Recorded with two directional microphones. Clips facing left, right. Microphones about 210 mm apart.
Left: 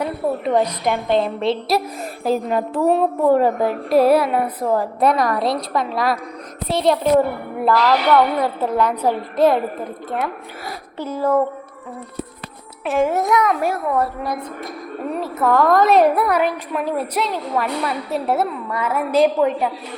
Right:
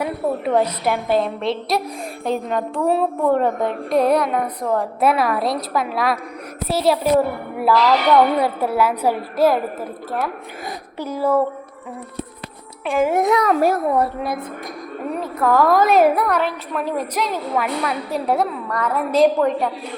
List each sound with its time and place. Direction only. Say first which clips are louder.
0.0 s a woman's voice: even; 10° right (ahead or behind)
11.0 s a woman's voice: even; 10° right (ahead or behind)
12.8 s a child's voice: left 1 dB; 5° left (ahead or behind)
13.1 s a woman's voice: right 2 dB; 15° right (ahead or behind)
13.3 s a child's voice: right 2 dB; 35° right (ahead or behind)
13.9 s a woman's voice: right 1 dB; 15° right (ahead or behind)
15.1 s a woman's voice: even; centre (ahead or behind)